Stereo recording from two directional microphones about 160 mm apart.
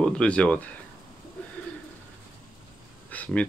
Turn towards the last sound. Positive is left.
turn(degrees=10)  # may be behind; listen again after turning